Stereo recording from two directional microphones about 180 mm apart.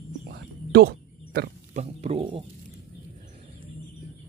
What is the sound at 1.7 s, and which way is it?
Speech, 35° right (ahead or behind).